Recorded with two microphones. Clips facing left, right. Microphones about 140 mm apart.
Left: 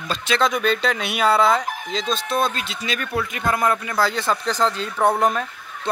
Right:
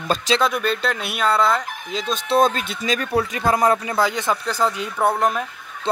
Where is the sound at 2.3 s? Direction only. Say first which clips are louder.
Right 8 dB; 40° right (ahead or behind).